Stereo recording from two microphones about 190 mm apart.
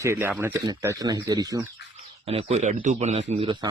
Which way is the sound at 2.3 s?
30° right (ahead or behind).